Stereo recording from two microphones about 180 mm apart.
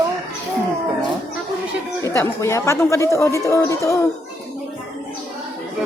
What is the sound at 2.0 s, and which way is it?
Speech, 15° left (ahead or behind).